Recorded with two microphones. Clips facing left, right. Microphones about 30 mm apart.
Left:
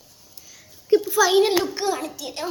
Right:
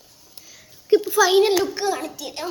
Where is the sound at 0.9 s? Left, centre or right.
Right.